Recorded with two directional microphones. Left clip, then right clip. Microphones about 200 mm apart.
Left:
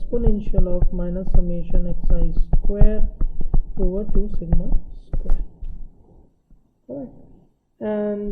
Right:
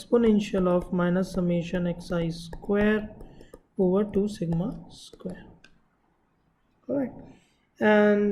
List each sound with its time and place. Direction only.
0.0 s speech: 5° right (ahead or behind)
6.8 s a man's voice: 15° right (ahead or behind)